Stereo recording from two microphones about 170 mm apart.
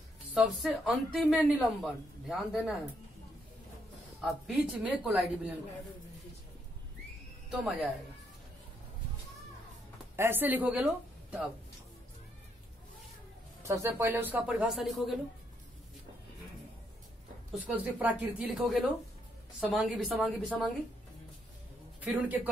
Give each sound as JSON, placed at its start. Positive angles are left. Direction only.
{"t": 0.3, "sound": "a woman's voice", "side_deg": -5}
{"t": 4.2, "sound": "speech", "side_deg": -5}
{"t": 10.1, "sound": "speech", "side_deg": -15}
{"t": 13.6, "sound": "speech", "side_deg": -15}
{"t": 17.6, "sound": "a woman's voice", "side_deg": -10}
{"t": 22.0, "sound": "speech", "side_deg": -10}